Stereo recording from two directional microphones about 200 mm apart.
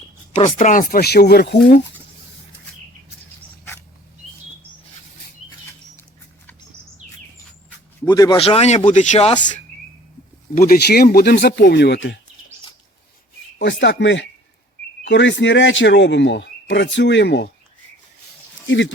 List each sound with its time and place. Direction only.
0.3 s speech: 35° left (ahead or behind); by 1.5 s 55° left (ahead or behind)
8.0 s speech: 20° left (ahead or behind)
8.4 s speech: 30° left (ahead or behind)
10.5 s speech: 45° left (ahead or behind); by 12.2 s 60° left (ahead or behind)
13.6 s speech: 60° left (ahead or behind)
18.7 s speech: 65° left (ahead or behind)